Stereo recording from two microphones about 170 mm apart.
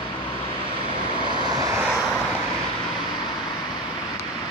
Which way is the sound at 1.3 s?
25° right (ahead or behind).